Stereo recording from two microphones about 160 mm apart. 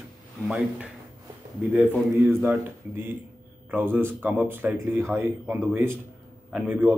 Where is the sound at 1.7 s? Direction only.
10° right (ahead or behind).